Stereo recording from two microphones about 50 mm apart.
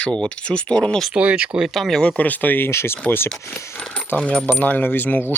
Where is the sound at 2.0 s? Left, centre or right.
Centre.